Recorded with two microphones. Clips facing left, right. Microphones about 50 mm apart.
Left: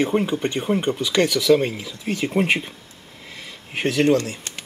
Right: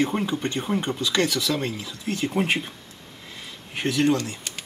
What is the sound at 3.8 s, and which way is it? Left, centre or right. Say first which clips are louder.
Speech: left 4 dB; left.